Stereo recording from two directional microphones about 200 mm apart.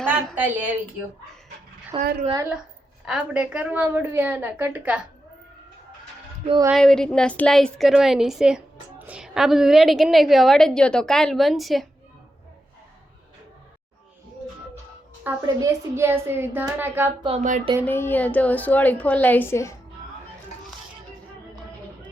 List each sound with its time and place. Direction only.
0.1 s a woman's voice: 10° right (ahead or behind)
1.9 s a woman's voice: 25° right (ahead or behind)
3.1 s a woman's voice: 5° right (ahead or behind)
6.7 s a woman's voice: centre (ahead or behind)
15.2 s a woman's voice: 15° right (ahead or behind)
17.2 s a sound: 35° right (ahead or behind)
17.8 s a woman's voice: 10° left (ahead or behind)